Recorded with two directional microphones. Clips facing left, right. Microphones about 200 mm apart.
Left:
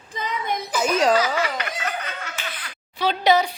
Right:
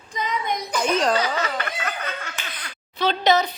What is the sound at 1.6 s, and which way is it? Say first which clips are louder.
Snicker: even; 45° right (ahead or behind).